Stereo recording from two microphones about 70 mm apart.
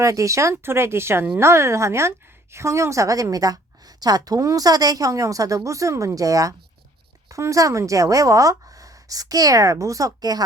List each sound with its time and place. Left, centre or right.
0.0 s a woman's voice: right
0.5 s a woman's voice: right